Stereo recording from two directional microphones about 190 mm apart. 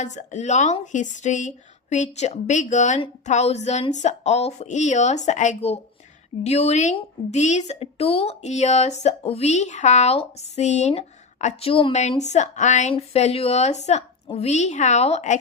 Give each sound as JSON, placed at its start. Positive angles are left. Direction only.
{"t": 0.0, "sound": "a woman's voice", "side_deg": 40}